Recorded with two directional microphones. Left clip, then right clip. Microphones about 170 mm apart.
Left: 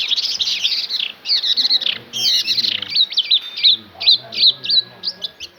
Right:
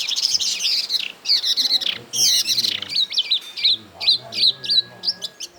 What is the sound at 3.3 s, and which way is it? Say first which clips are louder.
Bird: left 5 dB; 5° left (ahead or behind).